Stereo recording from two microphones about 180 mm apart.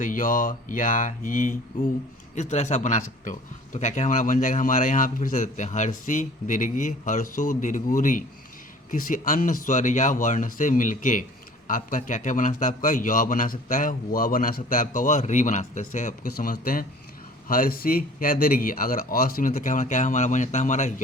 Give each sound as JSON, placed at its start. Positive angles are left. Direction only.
{"t": 0.0, "sound": "a man's voice", "side_deg": 50}